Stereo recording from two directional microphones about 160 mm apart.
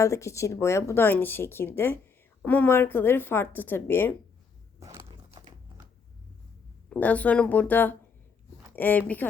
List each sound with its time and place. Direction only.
0.0 s speech: 20° left (ahead or behind)
4.8 s biting: 20° right (ahead or behind)
5.4 s typing: 25° right (ahead or behind)
6.9 s speech: 10° left (ahead or behind)